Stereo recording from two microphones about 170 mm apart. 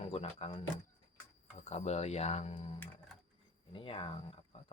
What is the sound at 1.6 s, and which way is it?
Speech, 40° left (ahead or behind).